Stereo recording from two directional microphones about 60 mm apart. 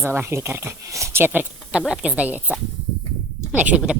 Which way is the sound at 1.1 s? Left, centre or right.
Right.